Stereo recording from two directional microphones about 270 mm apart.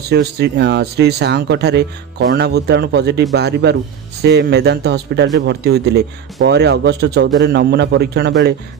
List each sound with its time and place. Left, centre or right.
0.1 s speech: right